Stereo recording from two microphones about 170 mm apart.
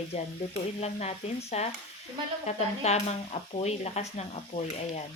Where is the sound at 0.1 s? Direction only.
40° left (ahead or behind).